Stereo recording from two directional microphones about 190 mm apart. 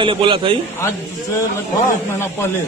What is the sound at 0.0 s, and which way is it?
Speech, 25° right (ahead or behind).